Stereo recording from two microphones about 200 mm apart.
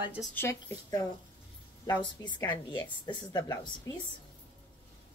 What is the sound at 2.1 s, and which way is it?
Speech, 20° left (ahead or behind).